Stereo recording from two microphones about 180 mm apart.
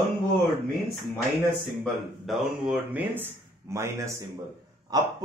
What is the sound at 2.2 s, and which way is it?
A man's voice, centre (ahead or behind).